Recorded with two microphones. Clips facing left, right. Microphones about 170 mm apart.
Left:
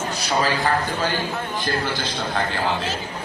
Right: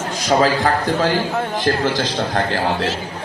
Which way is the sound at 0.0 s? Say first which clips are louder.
Right 6 dB; 90° right.